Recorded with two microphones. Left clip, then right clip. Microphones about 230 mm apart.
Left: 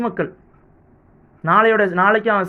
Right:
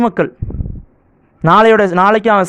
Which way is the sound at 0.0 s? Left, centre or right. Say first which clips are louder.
Right 8 dB; right.